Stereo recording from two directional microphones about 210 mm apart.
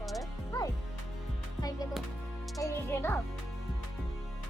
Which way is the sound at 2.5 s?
15° left (ahead or behind).